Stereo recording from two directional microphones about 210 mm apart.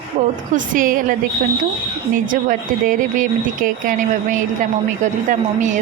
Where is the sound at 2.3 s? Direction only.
40° right (ahead or behind).